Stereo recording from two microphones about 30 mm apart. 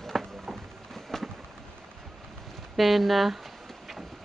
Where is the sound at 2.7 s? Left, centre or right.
Centre.